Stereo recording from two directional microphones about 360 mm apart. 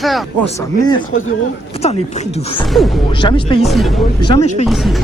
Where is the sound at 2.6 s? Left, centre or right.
Centre.